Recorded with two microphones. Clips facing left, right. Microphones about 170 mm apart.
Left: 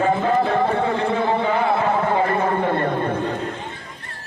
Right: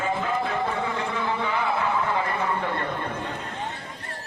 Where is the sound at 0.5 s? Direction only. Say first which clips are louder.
Left 7 dB; 60° left (ahead or behind).